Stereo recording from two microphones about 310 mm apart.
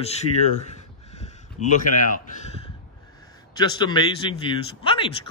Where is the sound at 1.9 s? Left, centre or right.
Left.